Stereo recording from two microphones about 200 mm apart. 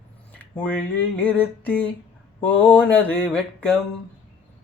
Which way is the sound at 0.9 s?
5° left (ahead or behind).